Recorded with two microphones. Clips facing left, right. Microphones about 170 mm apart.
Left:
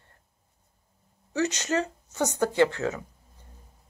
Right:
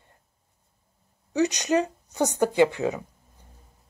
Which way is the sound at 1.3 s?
15° right (ahead or behind).